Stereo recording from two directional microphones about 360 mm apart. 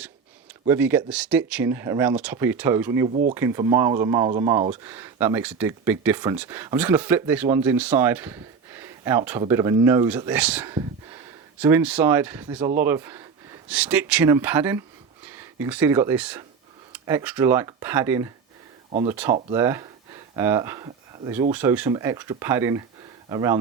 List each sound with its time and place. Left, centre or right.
0.7 s speech: centre
3.1 s speech: centre
3.3 s speech: centre